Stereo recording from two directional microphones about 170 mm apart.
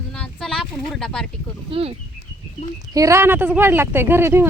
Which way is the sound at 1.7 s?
35° right (ahead or behind).